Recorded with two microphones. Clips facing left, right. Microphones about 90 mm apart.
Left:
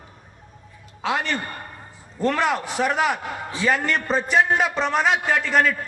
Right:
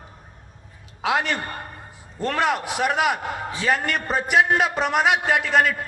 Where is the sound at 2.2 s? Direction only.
5° right (ahead or behind).